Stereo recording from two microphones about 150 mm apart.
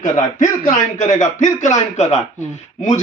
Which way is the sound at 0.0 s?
55° left (ahead or behind).